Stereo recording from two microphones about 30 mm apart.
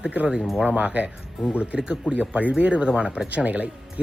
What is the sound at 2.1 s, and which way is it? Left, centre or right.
Speech, right.